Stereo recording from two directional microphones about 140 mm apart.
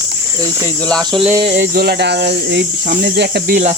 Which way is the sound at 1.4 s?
65° right (ahead or behind).